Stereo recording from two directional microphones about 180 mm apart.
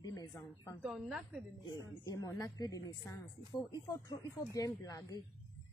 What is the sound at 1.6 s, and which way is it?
Speech, 20° left (ahead or behind).